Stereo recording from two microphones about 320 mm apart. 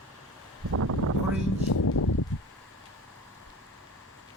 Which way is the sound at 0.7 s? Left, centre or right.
Right.